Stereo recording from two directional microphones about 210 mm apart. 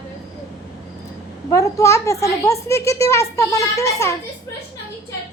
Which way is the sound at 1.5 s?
15° left (ahead or behind).